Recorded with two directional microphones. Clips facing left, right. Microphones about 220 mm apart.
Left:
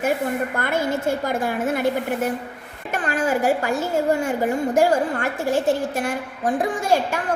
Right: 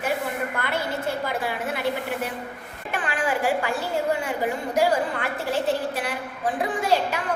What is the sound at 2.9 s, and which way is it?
A woman's voice, 45° left (ahead or behind).